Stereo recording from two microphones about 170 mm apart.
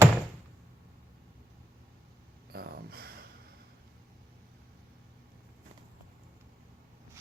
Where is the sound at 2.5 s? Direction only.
65° right (ahead or behind).